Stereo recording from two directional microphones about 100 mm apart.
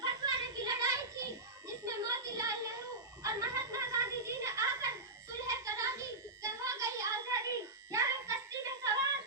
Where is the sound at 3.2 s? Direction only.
30° right (ahead or behind).